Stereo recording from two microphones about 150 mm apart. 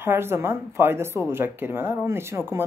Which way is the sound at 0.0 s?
15° right (ahead or behind).